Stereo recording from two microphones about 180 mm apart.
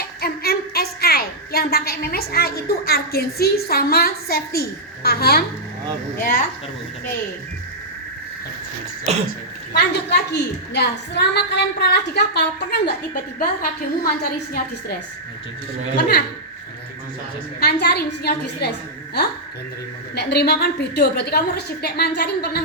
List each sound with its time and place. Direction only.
0.0 s a woman's voice: 60° left (ahead or behind)
6.1 s a woman's voice: 50° left (ahead or behind)
9.1 s cough: 35° right (ahead or behind)
9.7 s a woman's voice: 65° left (ahead or behind)
13.4 s a woman's voice: 55° left (ahead or behind)
17.6 s a woman's voice: 60° left (ahead or behind)
20.1 s a woman's voice: 65° left (ahead or behind)